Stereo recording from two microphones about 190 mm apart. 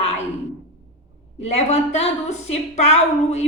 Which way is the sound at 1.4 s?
35° left (ahead or behind).